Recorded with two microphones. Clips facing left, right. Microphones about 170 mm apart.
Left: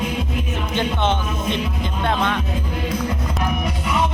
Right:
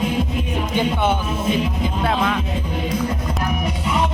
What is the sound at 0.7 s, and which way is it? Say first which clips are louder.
Speech: right 1 dB; 10° right (ahead or behind).